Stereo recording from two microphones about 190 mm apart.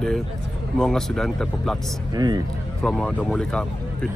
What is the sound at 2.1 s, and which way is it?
Speech, 20° right (ahead or behind).